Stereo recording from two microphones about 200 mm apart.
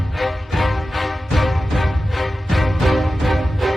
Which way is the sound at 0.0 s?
Centre (ahead or behind).